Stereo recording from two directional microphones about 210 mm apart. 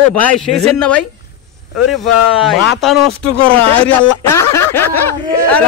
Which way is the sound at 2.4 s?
Centre (ahead or behind).